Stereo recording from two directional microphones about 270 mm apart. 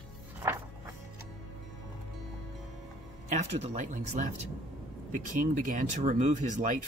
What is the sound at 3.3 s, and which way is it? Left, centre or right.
Speech, right.